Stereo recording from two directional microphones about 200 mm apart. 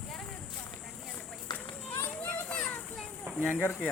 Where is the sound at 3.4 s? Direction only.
10° left (ahead or behind).